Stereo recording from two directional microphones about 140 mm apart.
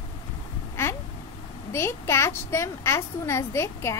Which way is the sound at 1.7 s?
20° left (ahead or behind).